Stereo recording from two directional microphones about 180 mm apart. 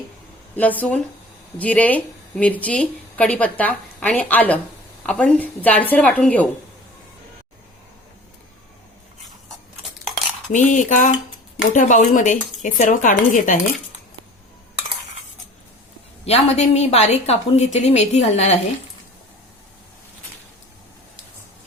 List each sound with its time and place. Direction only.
0.5 s speech: 10° left (ahead or behind)
10.5 s speech: 45° left (ahead or behind)
16.2 s a woman's voice: 35° left (ahead or behind)